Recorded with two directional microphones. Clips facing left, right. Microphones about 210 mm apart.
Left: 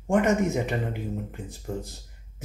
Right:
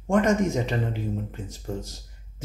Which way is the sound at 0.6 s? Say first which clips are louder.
Right 1 dB; 15° left (ahead or behind).